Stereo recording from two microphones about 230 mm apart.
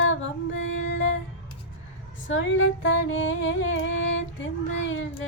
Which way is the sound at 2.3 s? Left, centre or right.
Left.